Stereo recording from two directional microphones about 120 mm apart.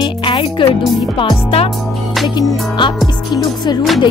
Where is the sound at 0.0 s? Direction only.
45° left (ahead or behind).